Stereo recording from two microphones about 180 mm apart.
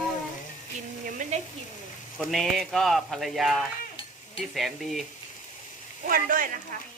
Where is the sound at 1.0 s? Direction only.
45° right (ahead or behind).